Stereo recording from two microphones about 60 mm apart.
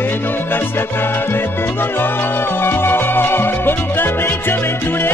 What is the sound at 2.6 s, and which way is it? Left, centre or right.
Music, left.